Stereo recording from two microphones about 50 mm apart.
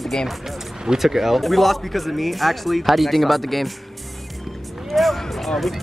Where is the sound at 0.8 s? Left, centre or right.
Centre.